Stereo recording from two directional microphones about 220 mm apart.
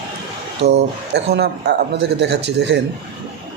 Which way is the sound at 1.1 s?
50° right (ahead or behind).